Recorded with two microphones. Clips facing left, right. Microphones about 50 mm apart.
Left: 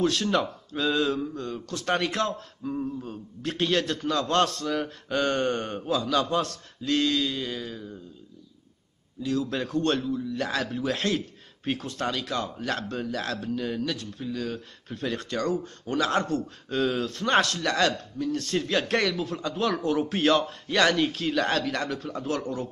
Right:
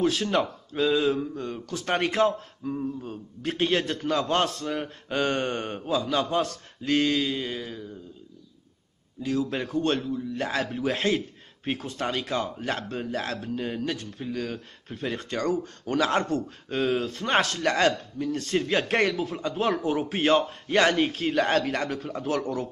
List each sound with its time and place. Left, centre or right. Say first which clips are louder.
0.0 s speech: even; centre
2.6 s speech: even; centre
3.1 s speech: right 1 dB; right
9.2 s speech: even; right
9.8 s speech: even; centre
10.5 s a man's voice: right 3 dB; right
11.6 s speech: even; right
12.1 s a man's voice: right 3 dB; right
14.9 s speech: left 1 dB; right
17.6 s a man's voice: right 2 dB; right